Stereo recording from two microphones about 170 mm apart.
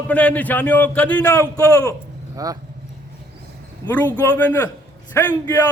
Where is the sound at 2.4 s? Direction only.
20° right (ahead or behind).